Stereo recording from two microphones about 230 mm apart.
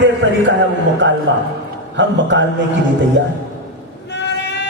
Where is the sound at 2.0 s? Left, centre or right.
Right.